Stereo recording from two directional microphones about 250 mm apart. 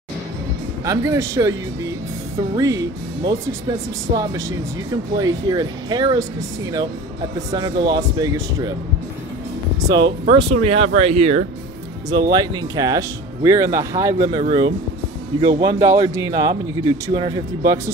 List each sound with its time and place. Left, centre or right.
0.8 s speech: centre
7.5 s speech: centre
9.8 s speech: centre